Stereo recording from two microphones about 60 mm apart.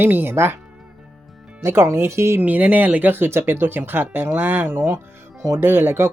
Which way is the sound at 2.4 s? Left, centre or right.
Right.